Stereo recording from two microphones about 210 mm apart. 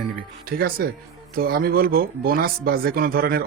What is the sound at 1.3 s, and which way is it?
Speech, 45° right (ahead or behind).